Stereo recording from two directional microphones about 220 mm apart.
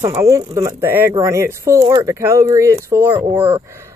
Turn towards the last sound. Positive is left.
turn(degrees=-10)  # may be behind; listen again after turning